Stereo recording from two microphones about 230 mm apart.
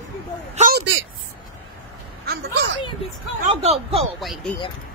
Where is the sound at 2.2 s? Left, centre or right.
Right.